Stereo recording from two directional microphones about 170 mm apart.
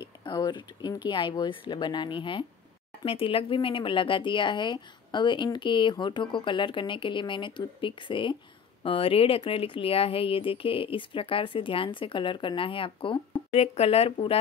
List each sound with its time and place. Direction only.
0.2 s speech: 25° left (ahead or behind)